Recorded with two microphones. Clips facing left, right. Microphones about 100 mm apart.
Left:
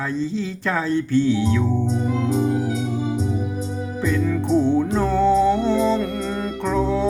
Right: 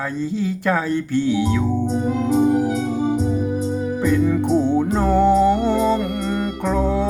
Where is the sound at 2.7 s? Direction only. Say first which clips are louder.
Right 3 dB; 35° right (ahead or behind).